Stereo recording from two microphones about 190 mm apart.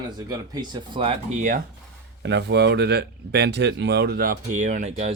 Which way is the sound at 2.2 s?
65° right (ahead or behind).